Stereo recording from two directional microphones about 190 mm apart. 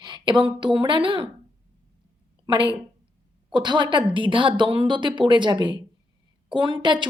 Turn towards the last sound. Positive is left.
turn(degrees=-25)  # may be behind; listen again after turning